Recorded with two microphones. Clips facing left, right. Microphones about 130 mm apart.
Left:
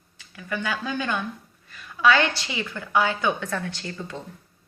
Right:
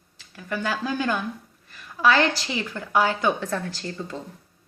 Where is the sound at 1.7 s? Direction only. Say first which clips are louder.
Even; 40° right (ahead or behind).